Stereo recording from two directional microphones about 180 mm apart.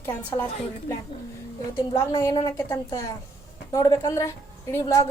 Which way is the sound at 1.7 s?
20° left (ahead or behind).